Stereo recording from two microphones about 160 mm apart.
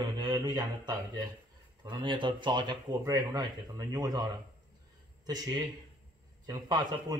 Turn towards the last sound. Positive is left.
turn(degrees=-25)  # may be behind; listen again after turning